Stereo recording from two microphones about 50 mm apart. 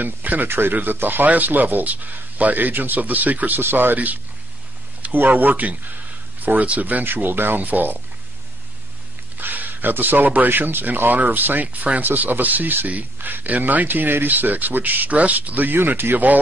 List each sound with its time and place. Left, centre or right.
0.0 s speech: right
9.4 s speech: right